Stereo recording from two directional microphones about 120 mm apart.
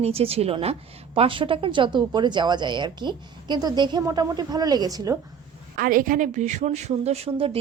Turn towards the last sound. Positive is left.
turn(degrees=-50)  # may be behind; listen again after turning